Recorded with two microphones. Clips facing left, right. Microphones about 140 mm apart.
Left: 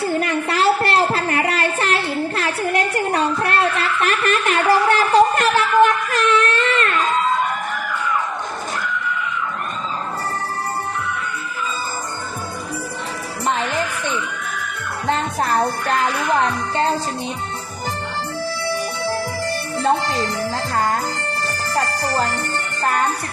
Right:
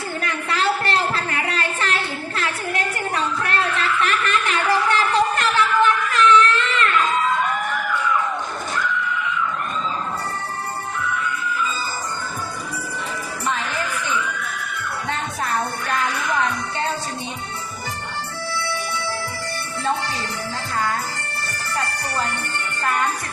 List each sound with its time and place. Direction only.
0.0 s a sound: 35° left (ahead or behind)
4.7 s wail: 40° left (ahead or behind)
13.4 s music: 45° left (ahead or behind)
15.0 s music: 35° left (ahead or behind)
18.6 s music: 40° left (ahead or behind)